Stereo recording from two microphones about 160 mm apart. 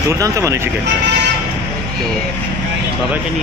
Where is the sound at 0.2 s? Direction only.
20° right (ahead or behind).